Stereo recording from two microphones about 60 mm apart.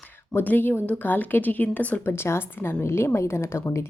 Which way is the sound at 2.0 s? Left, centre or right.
Left.